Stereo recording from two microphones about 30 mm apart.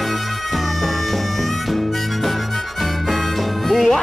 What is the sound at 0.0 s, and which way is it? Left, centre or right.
Music, centre.